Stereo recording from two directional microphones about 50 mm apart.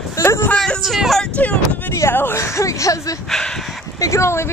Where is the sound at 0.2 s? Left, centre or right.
Left.